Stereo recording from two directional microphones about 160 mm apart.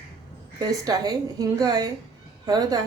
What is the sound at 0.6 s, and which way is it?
A woman's voice, 25° right (ahead or behind).